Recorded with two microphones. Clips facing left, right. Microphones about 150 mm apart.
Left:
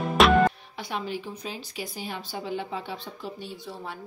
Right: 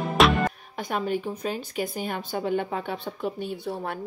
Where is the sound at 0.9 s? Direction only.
50° right (ahead or behind).